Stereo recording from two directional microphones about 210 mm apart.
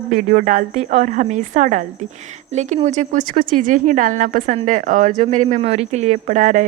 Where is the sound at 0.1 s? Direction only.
40° right (ahead or behind).